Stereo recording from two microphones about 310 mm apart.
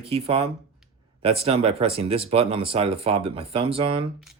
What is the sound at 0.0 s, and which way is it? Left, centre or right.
Speech, centre.